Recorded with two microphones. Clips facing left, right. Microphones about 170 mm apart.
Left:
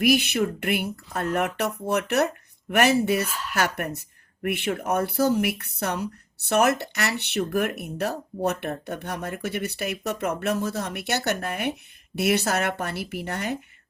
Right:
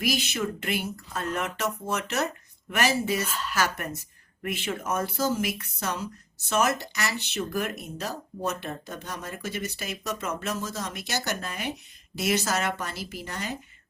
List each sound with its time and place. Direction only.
0.0 s speech: 60° left (ahead or behind)